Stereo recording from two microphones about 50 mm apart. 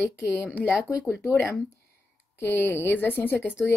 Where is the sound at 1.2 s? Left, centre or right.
Left.